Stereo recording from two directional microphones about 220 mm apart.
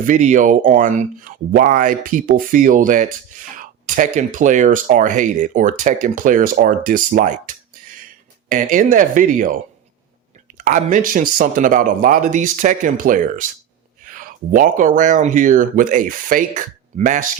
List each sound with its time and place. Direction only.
0.0 s speech: 35° right (ahead or behind)
10.6 s speech: 35° right (ahead or behind)